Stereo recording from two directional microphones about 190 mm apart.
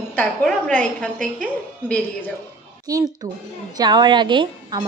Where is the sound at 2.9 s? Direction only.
20° right (ahead or behind).